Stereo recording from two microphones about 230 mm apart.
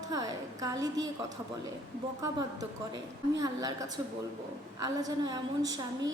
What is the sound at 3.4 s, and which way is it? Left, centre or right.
Speech, centre.